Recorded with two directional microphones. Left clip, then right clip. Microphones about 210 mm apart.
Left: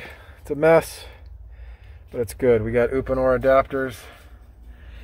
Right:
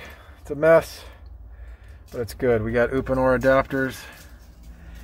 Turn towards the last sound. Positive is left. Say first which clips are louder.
# even
turn(degrees=0)  # may be behind; listen again after turning